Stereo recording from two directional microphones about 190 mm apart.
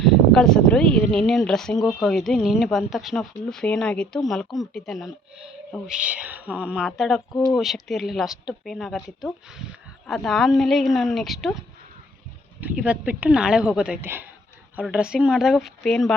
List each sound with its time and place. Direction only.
0.0 s speech: centre (ahead or behind)
12.5 s speech: 10° right (ahead or behind)